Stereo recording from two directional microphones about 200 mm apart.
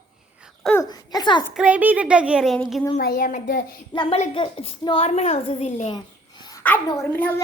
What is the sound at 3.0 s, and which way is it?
Speech, 50° left (ahead or behind).